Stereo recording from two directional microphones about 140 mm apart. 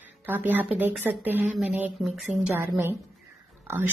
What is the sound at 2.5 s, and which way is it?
A woman's voice, 15° right (ahead or behind).